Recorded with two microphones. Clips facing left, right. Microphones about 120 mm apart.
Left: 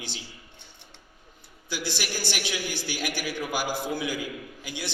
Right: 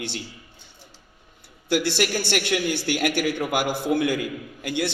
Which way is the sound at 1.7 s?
65° right (ahead or behind).